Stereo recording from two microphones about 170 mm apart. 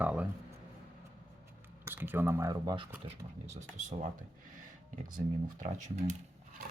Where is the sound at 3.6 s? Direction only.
45° right (ahead or behind).